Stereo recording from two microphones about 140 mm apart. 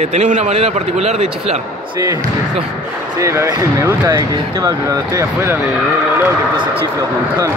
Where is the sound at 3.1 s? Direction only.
20° right (ahead or behind).